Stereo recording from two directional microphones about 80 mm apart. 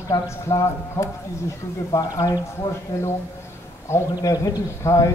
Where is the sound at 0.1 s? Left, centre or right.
Left.